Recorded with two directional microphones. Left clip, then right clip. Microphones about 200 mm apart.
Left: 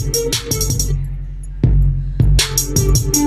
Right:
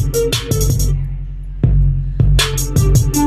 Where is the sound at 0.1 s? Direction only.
20° right (ahead or behind).